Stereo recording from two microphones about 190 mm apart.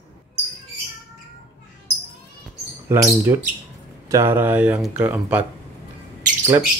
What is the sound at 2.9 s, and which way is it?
Speech, 10° right (ahead or behind).